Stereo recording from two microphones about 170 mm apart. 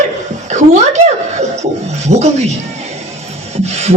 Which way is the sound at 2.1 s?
40° right (ahead or behind).